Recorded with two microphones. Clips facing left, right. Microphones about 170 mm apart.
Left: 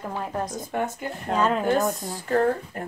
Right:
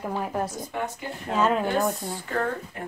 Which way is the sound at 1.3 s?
5° right (ahead or behind).